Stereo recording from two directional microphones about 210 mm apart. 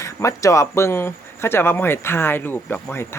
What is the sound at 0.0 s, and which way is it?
Speech, 15° left (ahead or behind).